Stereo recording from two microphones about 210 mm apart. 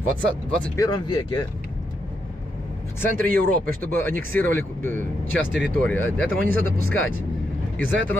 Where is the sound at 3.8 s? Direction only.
10° left (ahead or behind).